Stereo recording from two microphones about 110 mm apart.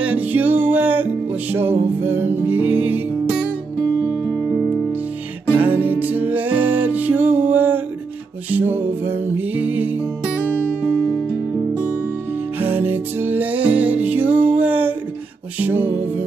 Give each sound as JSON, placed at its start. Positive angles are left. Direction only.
{"t": 0.0, "sound": "music", "side_deg": -15}
{"t": 5.5, "sound": "music", "side_deg": -15}
{"t": 12.5, "sound": "music", "side_deg": -20}
{"t": 14.4, "sound": "a sound", "side_deg": -15}
{"t": 15.6, "sound": "music", "side_deg": -20}